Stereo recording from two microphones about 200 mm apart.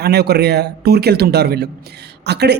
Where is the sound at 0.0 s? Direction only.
55° right (ahead or behind).